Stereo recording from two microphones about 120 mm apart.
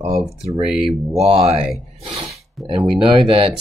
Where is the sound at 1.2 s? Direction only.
60° right (ahead or behind).